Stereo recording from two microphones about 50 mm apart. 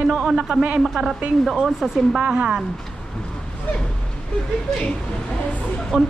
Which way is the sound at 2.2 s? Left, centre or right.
Centre.